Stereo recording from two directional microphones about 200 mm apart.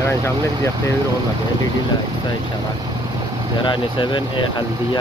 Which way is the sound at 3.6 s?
25° left (ahead or behind).